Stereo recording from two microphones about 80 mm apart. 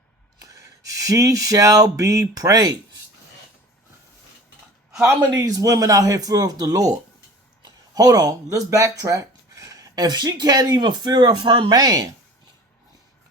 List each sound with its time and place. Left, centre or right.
0.3 s a sound: right
5.3 s speech: right
11.7 s speech: right